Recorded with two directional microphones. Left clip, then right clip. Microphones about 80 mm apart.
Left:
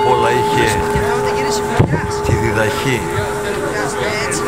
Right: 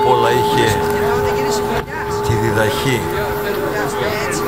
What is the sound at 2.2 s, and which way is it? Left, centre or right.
Speech, centre.